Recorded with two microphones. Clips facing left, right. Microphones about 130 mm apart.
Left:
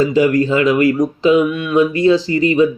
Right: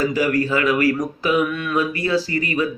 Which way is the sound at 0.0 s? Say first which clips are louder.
Left 6 dB; 25° left (ahead or behind).